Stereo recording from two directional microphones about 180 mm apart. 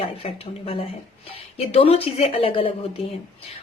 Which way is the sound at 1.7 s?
35° left (ahead or behind).